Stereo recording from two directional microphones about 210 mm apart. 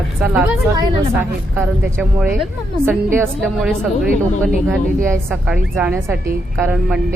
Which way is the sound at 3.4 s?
Centre (ahead or behind).